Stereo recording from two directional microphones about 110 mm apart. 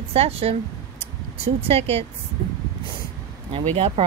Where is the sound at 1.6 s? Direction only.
65° right (ahead or behind).